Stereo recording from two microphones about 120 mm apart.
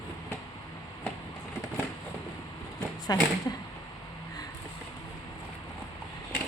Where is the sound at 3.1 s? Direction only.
30° left (ahead or behind).